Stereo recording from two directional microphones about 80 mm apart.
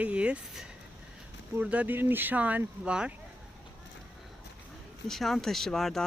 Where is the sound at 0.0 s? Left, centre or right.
Centre.